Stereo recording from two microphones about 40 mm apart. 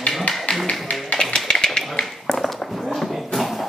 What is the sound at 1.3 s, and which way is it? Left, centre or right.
Tap, centre.